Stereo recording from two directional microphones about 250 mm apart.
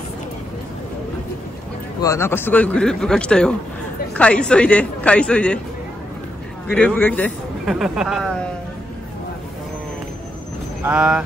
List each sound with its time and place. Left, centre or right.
2.0 s speech: centre
6.7 s speech: centre
10.8 s speech: centre